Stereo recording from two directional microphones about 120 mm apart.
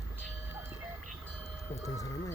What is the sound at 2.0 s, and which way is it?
Speech, 30° left (ahead or behind).